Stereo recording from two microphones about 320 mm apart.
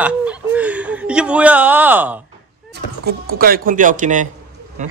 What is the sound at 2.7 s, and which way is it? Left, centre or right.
Speech, right.